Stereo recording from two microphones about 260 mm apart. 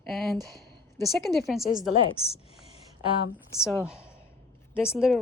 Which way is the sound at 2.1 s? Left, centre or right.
Left.